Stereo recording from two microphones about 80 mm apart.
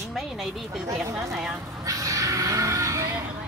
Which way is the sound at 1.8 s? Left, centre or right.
Right.